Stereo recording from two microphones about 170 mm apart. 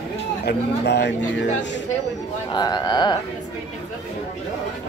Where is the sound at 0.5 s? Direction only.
80° left.